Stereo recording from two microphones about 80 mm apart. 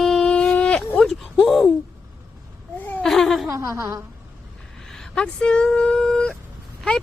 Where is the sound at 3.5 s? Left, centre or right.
Right.